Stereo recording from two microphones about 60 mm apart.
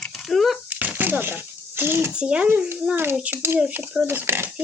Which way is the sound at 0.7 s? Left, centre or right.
Right.